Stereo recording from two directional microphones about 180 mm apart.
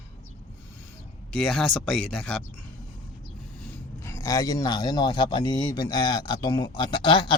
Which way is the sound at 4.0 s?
15° left (ahead or behind).